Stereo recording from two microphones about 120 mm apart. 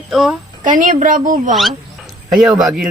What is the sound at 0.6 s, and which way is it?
Speech, 90° right.